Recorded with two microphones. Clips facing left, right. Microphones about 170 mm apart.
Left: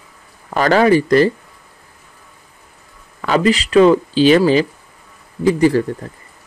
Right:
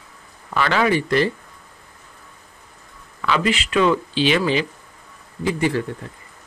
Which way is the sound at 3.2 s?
40° left (ahead or behind).